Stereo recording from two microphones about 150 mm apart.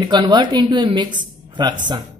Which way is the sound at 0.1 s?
30° right (ahead or behind).